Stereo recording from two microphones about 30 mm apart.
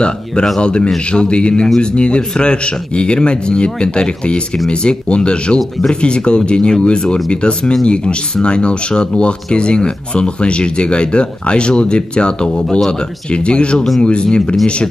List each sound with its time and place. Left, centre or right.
0.6 s speech: left